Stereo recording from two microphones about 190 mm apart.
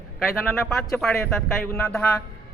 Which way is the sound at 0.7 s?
Centre (ahead or behind).